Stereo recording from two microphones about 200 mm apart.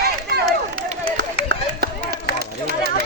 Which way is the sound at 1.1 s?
60° right (ahead or behind).